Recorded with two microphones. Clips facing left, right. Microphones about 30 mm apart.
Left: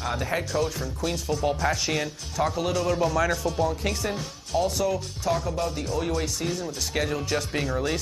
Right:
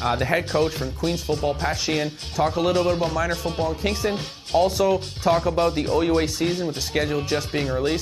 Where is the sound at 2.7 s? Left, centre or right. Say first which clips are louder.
Right 3 dB; right.